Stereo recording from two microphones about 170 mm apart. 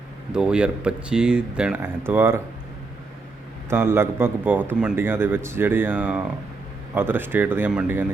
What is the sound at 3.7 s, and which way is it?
Speech, 15° right (ahead or behind).